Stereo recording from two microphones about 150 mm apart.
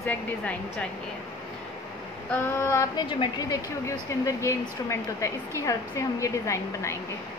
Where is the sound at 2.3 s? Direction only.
20° left (ahead or behind).